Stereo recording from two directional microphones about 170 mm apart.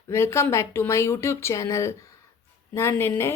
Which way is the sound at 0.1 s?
15° left (ahead or behind).